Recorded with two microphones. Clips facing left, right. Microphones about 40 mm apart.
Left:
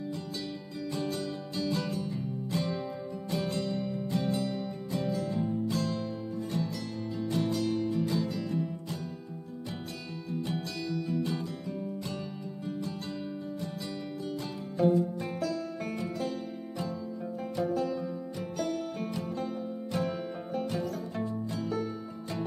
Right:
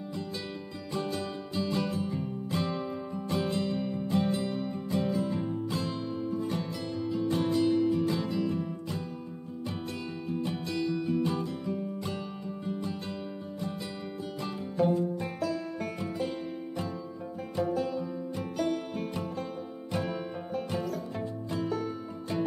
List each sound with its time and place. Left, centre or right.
0.9 s music: centre
10.4 s music: right
14.8 s music: centre
17.6 s music: centre
18.3 s music: right
19.2 s music: centre